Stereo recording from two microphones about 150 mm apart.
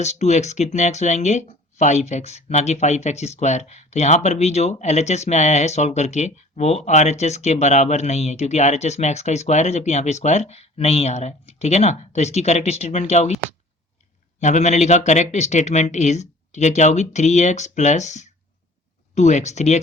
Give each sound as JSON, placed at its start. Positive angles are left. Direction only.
{"t": 0.0, "sound": "speech", "side_deg": 50}
{"t": 14.4, "sound": "speech", "side_deg": 50}